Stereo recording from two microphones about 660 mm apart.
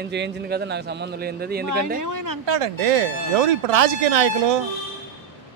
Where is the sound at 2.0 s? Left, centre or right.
Right.